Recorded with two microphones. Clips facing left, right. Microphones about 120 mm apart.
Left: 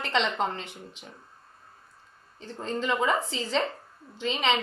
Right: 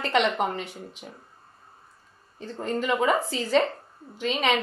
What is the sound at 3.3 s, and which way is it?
Speech, 25° left (ahead or behind).